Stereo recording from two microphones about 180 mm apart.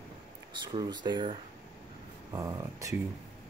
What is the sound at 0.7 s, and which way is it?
Speech, 25° right (ahead or behind).